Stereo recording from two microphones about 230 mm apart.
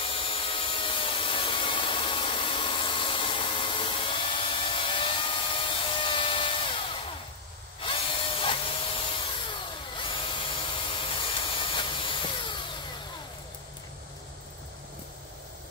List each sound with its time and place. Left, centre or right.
0.0 s wood: left
7.8 s tools: left